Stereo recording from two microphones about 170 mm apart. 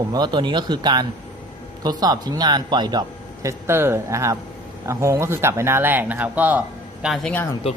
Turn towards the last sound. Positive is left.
turn(degrees=10)  # may be behind; listen again after turning